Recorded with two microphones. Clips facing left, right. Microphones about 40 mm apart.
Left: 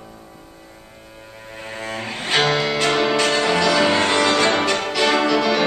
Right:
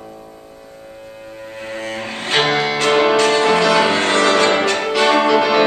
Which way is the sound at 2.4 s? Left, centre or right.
Centre.